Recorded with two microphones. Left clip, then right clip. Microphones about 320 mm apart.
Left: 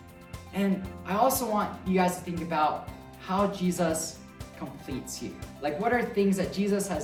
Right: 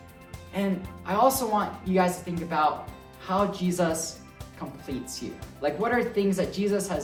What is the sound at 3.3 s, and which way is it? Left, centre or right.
Speech, centre.